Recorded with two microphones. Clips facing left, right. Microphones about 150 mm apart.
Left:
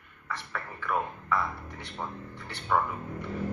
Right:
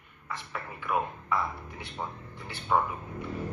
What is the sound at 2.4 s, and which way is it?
Speech, 20° right (ahead or behind).